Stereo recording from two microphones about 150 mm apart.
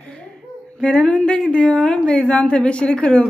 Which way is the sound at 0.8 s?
5° left (ahead or behind).